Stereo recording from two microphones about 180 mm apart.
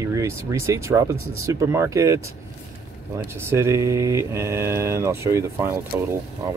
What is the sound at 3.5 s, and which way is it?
Speech, 15° right (ahead or behind).